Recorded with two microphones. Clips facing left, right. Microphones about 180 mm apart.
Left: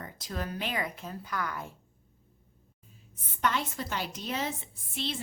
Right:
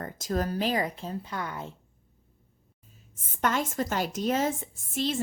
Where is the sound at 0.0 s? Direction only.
45° right (ahead or behind); by 1.7 s 25° right (ahead or behind).